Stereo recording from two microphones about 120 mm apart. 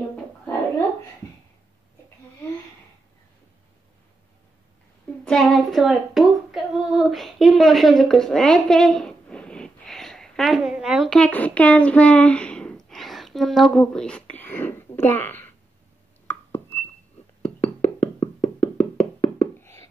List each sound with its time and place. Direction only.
5.2 s female singing: 5° left (ahead or behind)
16.3 s a sound: 20° left (ahead or behind)
17.4 s music: 60° left (ahead or behind)